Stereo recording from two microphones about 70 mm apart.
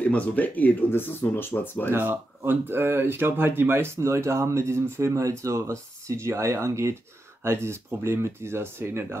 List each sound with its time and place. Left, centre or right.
0.0 s speech: left
1.9 s speech: right